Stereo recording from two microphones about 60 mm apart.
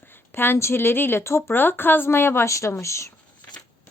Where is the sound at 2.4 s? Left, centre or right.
Left.